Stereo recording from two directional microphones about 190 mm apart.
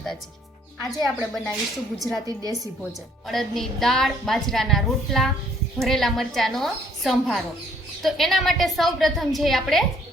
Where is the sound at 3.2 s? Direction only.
Centre (ahead or behind).